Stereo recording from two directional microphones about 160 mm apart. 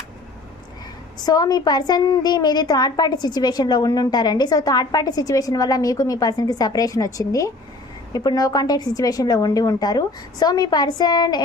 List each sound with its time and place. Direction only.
1.2 s a woman's voice: 25° left (ahead or behind)